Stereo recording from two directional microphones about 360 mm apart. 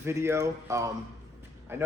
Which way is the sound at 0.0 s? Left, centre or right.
Centre.